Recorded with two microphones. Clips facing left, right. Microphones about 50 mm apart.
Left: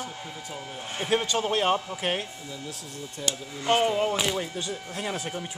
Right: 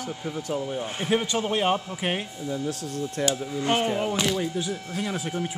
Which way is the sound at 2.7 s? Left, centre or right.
Right.